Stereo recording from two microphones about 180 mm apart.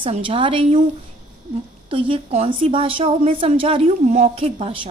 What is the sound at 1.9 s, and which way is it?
A woman's voice, 30° right (ahead or behind).